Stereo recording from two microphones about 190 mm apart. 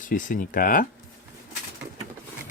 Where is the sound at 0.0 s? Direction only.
45° left (ahead or behind).